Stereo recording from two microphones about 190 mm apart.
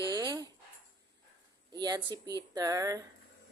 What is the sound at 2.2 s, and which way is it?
Speech, 20° right (ahead or behind).